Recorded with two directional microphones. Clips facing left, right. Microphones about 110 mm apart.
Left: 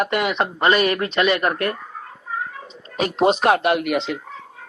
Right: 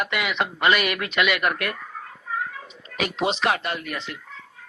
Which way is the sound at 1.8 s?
15° left (ahead or behind).